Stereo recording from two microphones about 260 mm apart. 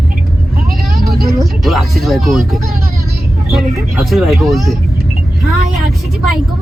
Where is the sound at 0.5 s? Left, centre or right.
Right.